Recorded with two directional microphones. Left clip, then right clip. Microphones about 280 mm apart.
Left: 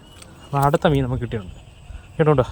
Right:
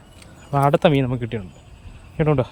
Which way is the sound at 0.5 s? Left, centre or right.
Centre.